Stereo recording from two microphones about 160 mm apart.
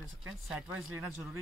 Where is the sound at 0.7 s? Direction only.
15° right (ahead or behind).